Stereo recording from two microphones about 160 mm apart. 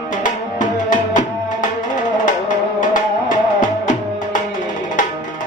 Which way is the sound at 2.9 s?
55° left (ahead or behind).